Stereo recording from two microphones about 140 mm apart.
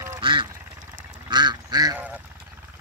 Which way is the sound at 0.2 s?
35° right (ahead or behind).